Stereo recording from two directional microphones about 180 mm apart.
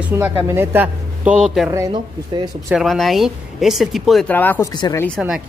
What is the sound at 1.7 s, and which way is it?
Speech, 20° right (ahead or behind).